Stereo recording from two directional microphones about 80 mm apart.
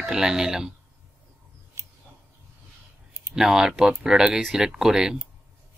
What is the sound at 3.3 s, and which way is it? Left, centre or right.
Speech, centre.